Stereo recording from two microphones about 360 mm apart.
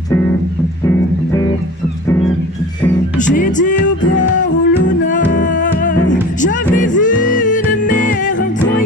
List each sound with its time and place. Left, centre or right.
3.3 s music: left